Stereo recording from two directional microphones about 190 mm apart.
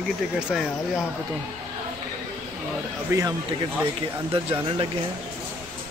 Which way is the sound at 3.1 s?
15° right (ahead or behind).